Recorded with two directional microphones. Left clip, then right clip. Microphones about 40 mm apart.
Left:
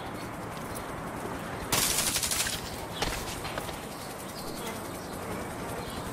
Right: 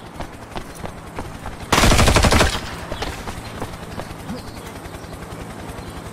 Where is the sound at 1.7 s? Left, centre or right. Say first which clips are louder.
Right 14 dB; left.